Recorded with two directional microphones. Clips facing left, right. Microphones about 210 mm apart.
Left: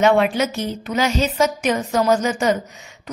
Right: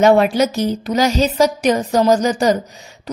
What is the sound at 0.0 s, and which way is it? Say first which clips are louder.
A woman's voice: right 4 dB; 40° right (ahead or behind).